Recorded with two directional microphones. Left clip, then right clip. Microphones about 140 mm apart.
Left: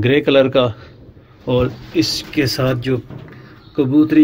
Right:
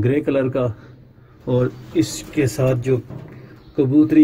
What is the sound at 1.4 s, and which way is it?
Speech, 30° right (ahead or behind).